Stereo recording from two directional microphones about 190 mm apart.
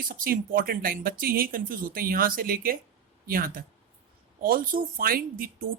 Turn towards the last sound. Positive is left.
turn(degrees=-50)  # may be behind; listen again after turning